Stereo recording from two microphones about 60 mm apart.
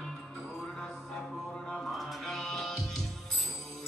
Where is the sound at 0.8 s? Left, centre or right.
Centre.